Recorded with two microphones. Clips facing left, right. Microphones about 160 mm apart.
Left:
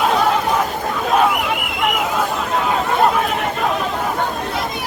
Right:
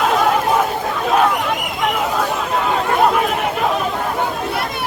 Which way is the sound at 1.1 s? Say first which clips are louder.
Even; 5° left (ahead or behind).